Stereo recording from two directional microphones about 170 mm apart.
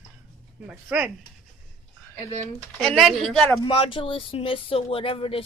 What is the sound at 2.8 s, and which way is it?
Speech, centre (ahead or behind).